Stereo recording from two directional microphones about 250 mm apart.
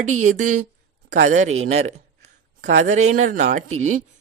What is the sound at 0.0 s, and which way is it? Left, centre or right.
Speech, right.